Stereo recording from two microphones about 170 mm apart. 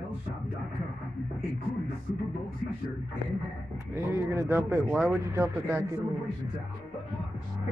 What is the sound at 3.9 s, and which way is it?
Speech, 15° right (ahead or behind).